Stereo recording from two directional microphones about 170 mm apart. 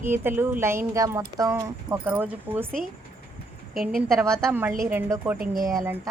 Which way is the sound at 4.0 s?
Centre (ahead or behind).